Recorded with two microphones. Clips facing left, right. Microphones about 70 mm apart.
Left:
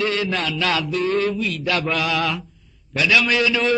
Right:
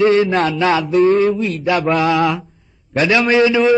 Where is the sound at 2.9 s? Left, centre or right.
Right.